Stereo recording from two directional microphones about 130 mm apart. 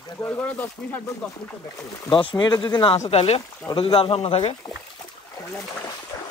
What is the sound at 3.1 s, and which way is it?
Speech, 50° left (ahead or behind).